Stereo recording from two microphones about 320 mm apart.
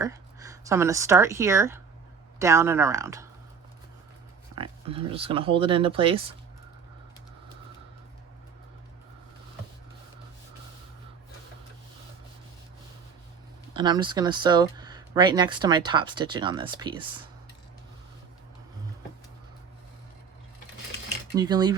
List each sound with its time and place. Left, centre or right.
0.0 s speech: centre
4.5 s speech: centre
13.7 s speech: centre
21.3 s speech: centre